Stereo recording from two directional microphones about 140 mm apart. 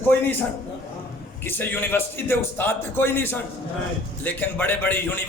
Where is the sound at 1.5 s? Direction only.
15° left (ahead or behind).